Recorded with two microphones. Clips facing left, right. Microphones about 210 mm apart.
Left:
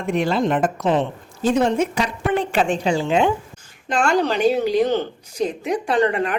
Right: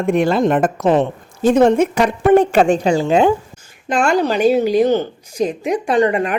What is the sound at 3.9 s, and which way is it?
A woman's voice, 10° right (ahead or behind).